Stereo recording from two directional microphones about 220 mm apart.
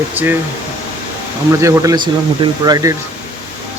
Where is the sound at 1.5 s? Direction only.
15° right (ahead or behind).